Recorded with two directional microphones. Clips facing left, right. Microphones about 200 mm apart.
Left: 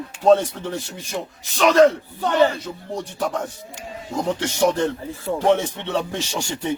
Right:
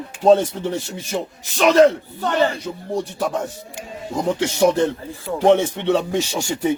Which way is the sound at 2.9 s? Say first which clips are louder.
Right 3 dB; 5° right (ahead or behind).